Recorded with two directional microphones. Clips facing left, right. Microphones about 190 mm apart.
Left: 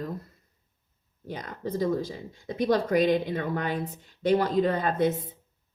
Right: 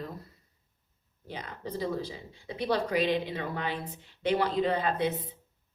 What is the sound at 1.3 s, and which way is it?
A woman's voice, 45° left (ahead or behind).